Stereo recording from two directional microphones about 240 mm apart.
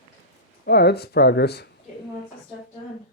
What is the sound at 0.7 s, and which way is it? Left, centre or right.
Speech, left.